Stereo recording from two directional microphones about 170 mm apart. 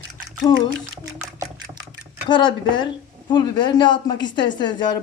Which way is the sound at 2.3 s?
25° left (ahead or behind).